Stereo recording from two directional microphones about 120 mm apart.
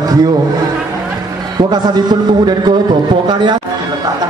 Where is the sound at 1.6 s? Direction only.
35° right (ahead or behind).